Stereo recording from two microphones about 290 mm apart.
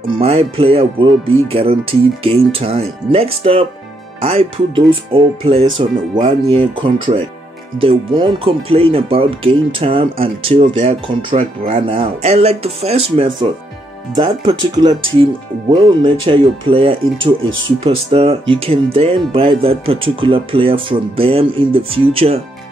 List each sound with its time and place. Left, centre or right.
0.1 s speech: centre
17.4 s speech: right
17.8 s speech: centre